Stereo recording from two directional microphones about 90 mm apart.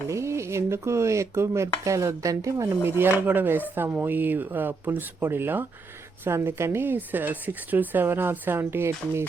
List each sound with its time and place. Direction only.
0.1 s a woman's voice: 30° right (ahead or behind)